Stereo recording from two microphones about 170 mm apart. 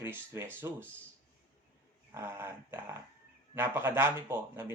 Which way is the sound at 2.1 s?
15° right (ahead or behind).